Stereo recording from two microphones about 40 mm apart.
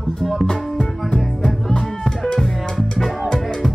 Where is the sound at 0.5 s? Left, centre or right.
Left.